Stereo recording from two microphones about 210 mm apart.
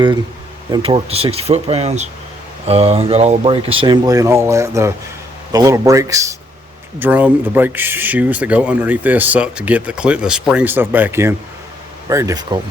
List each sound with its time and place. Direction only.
0.7 s speech: 25° right (ahead or behind)